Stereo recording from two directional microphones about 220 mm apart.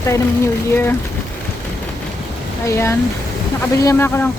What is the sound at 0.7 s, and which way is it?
Speech, 10° left (ahead or behind).